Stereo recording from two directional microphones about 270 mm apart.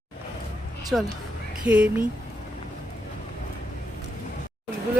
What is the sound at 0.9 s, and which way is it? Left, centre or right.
Speech, centre.